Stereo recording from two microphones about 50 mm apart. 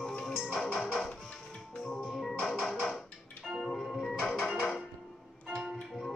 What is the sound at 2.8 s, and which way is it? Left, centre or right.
Music, centre.